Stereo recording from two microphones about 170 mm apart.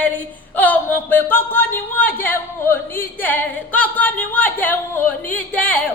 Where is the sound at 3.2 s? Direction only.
10° left (ahead or behind).